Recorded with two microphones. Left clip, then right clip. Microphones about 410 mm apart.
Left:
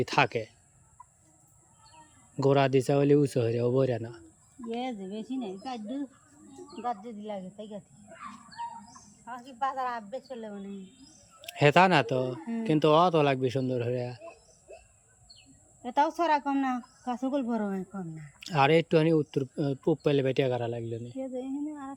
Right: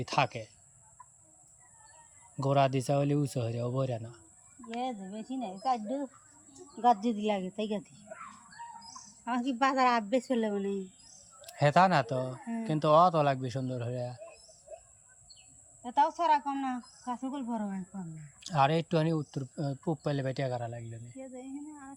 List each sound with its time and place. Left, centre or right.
0.0 s speech: centre
2.4 s speech: centre
6.8 s a woman's voice: right
9.3 s a woman's voice: right
11.4 s speech: centre
15.8 s speech: centre